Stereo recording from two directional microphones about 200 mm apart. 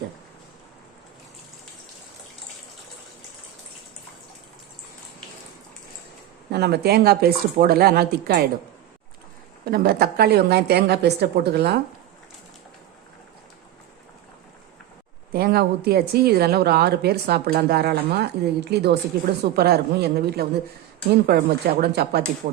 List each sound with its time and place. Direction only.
6.5 s a woman's voice: 55° right (ahead or behind)
9.6 s a woman's voice: 50° right (ahead or behind)
15.3 s a woman's voice: 50° right (ahead or behind)